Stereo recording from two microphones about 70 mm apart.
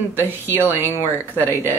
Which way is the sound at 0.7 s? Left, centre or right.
Left.